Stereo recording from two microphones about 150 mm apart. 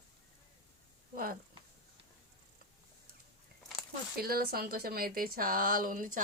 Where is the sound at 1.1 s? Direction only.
70° right (ahead or behind).